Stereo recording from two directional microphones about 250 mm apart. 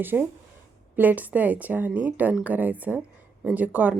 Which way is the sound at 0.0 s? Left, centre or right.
Centre.